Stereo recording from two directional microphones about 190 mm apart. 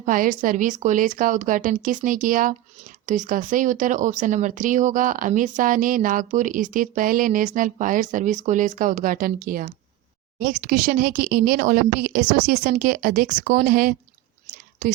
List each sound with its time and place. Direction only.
0.0 s speech: 45° right (ahead or behind)
14.5 s whispering: 45° right (ahead or behind)